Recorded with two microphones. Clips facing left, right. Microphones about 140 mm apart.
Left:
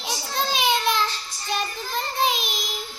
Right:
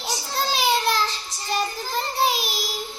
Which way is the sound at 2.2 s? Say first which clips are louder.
Right 1 dB; 5° right (ahead or behind).